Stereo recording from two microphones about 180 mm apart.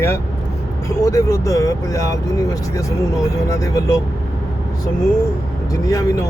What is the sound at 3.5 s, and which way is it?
Speech, 20° left (ahead or behind).